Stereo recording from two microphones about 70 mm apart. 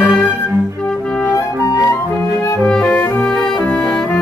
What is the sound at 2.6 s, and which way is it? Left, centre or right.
Music, centre.